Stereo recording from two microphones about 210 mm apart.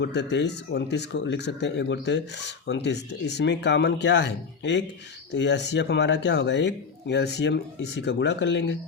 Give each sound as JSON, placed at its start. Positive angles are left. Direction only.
{"t": 0.0, "sound": "speech", "side_deg": 55}